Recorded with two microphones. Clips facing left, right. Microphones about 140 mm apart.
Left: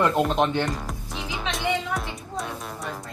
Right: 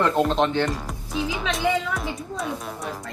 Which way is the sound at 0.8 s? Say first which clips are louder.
Right 5 dB; centre (ahead or behind).